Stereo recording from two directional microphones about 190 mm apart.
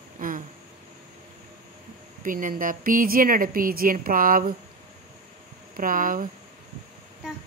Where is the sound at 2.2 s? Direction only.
45° right (ahead or behind).